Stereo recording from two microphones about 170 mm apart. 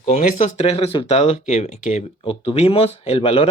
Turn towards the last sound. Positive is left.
turn(degrees=35)  # may be behind; listen again after turning